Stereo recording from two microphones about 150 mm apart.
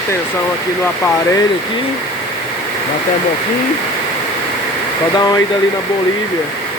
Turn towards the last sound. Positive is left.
turn(degrees=25)  # may be behind; listen again after turning